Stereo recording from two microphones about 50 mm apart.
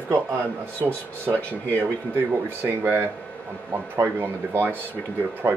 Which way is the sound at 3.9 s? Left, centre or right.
Right.